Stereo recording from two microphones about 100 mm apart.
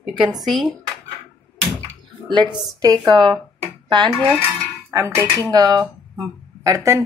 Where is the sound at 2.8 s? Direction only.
40° right (ahead or behind).